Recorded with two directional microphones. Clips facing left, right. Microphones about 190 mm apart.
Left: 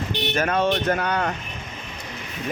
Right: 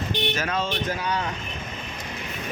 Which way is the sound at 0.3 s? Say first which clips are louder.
Left 6 dB; 55° left (ahead or behind).